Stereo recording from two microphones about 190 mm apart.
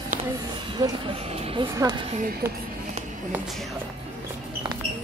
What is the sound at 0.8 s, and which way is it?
Speech, 25° right (ahead or behind).